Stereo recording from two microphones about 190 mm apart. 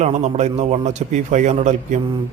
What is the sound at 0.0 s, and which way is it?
A man's voice, 35° right (ahead or behind).